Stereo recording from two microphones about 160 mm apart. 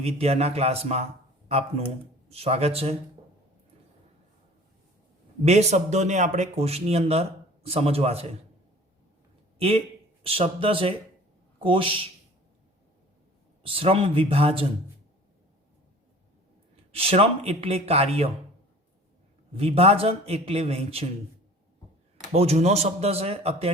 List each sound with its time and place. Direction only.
0.0 s speech: 40° right (ahead or behind)
2.3 s speech: 40° right (ahead or behind)
5.5 s speech: 45° right (ahead or behind)
9.6 s a man's voice: 35° right (ahead or behind)
13.6 s speech: 35° right (ahead or behind)
16.9 s speech: 35° right (ahead or behind)
19.5 s speech: 35° right (ahead or behind)
22.3 s speech: 45° right (ahead or behind)